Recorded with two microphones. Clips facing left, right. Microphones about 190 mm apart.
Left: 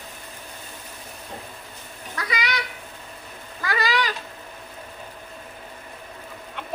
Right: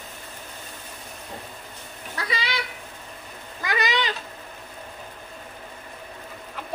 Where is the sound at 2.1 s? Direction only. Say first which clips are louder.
Left 1 dB; 30° right (ahead or behind).